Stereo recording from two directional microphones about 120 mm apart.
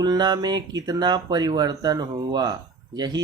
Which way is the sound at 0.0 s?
35° right (ahead or behind).